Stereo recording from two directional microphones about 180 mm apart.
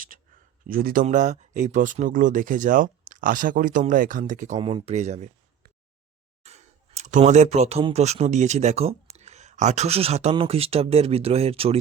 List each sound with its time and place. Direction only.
0.1 s a sound: 50° right (ahead or behind)
0.7 s speech: 55° right (ahead or behind)
1.0 s speech: 40° right (ahead or behind)